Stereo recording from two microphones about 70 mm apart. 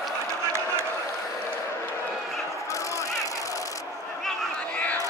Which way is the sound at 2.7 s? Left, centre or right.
Left.